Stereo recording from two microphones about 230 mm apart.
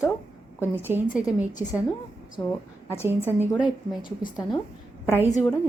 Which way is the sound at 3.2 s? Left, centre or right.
Centre.